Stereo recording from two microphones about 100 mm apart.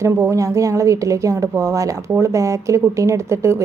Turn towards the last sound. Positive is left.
turn(degrees=-30)  # may be behind; listen again after turning